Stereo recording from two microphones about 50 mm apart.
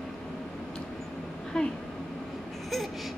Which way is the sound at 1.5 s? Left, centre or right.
Centre.